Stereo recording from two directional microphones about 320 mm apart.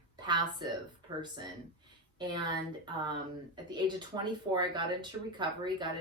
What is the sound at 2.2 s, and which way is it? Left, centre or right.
A woman's voice, centre.